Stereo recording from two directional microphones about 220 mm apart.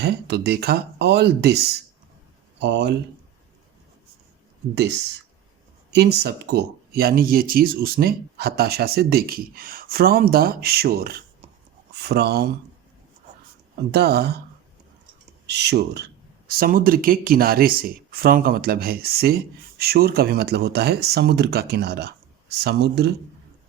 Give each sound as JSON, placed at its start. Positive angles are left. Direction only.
{"t": 0.0, "sound": "speech", "side_deg": -50}
{"t": 4.7, "sound": "speech", "side_deg": -50}
{"t": 13.9, "sound": "speech", "side_deg": -45}
{"t": 15.4, "sound": "speech", "side_deg": -50}